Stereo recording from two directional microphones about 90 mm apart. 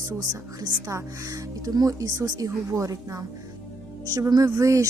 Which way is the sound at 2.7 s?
35° right (ahead or behind).